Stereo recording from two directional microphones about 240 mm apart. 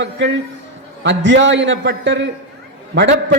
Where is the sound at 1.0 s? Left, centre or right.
Right.